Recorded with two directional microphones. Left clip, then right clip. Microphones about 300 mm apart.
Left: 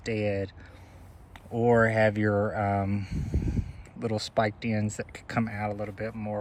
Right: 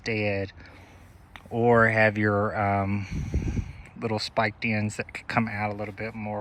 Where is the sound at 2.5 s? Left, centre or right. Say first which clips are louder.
Right 3 dB; centre.